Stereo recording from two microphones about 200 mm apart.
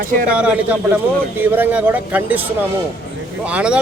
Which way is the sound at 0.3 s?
5° right (ahead or behind).